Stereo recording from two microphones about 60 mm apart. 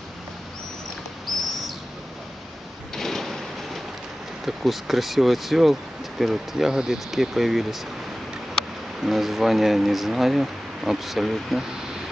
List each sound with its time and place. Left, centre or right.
3.0 s a sound: centre
4.5 s speech: centre
9.0 s speech: centre